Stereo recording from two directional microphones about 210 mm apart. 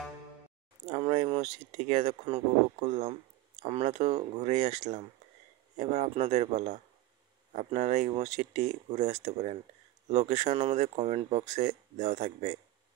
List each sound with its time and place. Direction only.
0.8 s speech: 30° right (ahead or behind)